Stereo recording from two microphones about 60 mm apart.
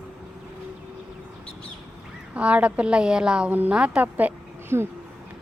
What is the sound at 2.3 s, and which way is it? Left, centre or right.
A woman's voice, right.